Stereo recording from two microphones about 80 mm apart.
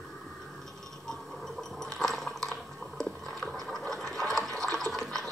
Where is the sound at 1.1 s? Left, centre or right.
Centre.